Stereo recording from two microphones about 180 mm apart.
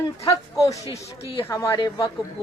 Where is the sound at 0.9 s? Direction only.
15° left (ahead or behind).